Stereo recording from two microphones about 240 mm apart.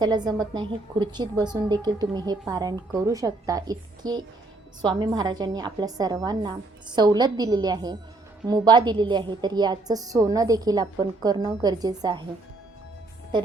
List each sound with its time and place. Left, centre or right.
0.0 s a woman's voice: centre